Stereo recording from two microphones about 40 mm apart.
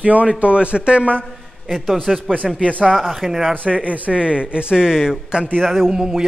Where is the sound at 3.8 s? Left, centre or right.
Right.